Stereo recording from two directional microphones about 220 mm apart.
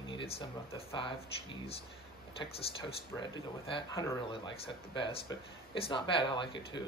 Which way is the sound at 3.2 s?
20° left (ahead or behind).